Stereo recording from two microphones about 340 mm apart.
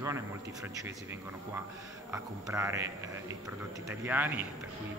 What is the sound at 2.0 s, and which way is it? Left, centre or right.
A man's voice, centre.